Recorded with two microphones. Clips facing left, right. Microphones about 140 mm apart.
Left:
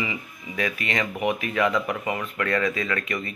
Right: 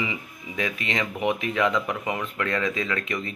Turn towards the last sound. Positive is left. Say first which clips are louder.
# even
turn(degrees=-20)  # may be behind; listen again after turning